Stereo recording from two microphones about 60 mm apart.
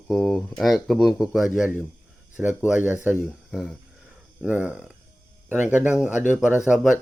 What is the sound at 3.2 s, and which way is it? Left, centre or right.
Speech, centre.